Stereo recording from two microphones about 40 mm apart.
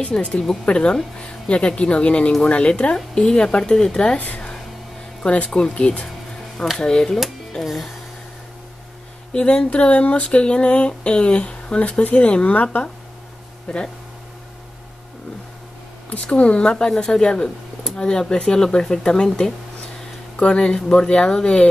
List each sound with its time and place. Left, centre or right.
0.1 s speech: centre
5.2 s speech: left
6.8 s speech: centre
7.6 s music: centre
9.3 s speech: left
13.7 s speech: left
16.1 s speech: left